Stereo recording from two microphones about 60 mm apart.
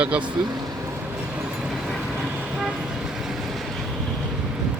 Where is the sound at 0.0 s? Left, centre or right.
Right.